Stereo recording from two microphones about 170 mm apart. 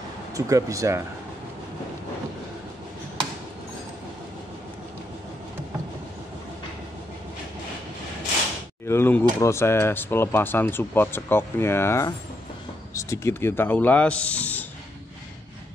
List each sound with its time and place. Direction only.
0.3 s speech: 20° right (ahead or behind)
8.8 s speech: 15° left (ahead or behind)